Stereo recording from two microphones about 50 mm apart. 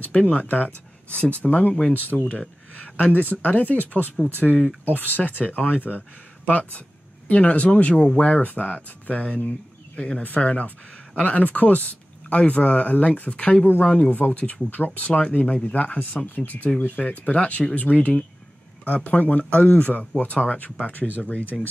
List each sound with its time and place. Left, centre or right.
0.0 s speech: left
4.4 s speech: centre
4.8 s speech: left
13.4 s speech: centre